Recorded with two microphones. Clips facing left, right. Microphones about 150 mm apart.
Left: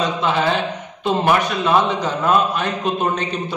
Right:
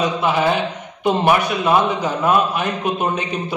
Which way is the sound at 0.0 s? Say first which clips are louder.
Right 1 dB; 15° right (ahead or behind).